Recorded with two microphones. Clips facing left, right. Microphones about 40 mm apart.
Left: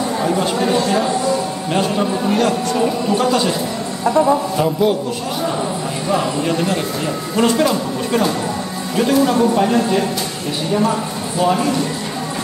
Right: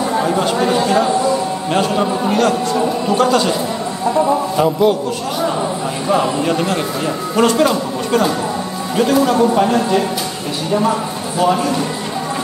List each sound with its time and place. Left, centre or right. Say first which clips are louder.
0.0 s speech: right 2 dB; centre
2.3 s a man's voice: right 2 dB; centre
6.0 s a man's voice: right 3 dB; centre